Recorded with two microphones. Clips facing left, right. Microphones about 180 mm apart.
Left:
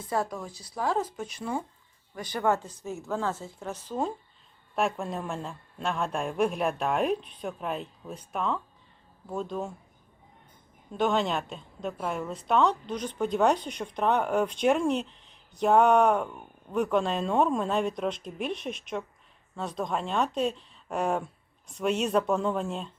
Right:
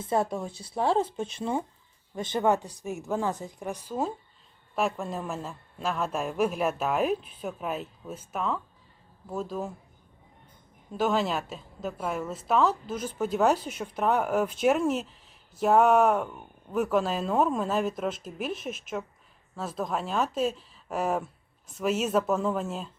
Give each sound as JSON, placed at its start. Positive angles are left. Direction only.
{"t": 0.0, "sound": "a woman's voice", "side_deg": -25}
{"t": 10.9, "sound": "a woman's voice", "side_deg": -5}